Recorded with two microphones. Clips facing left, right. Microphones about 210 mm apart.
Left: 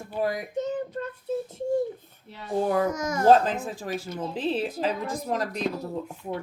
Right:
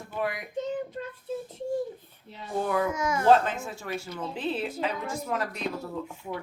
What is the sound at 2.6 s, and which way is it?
A child's voice, 35° left (ahead or behind).